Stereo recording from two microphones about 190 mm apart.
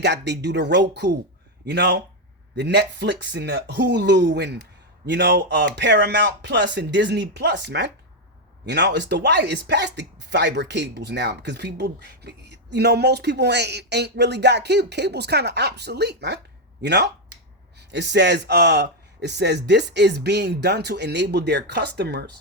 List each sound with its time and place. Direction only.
0.0 s speech: 65° right (ahead or behind)